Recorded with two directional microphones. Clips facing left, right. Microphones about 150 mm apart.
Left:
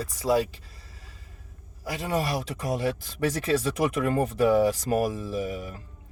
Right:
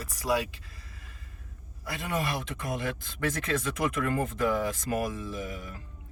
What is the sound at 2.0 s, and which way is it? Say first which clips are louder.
Speech: left 4 dB; 35° left (ahead or behind).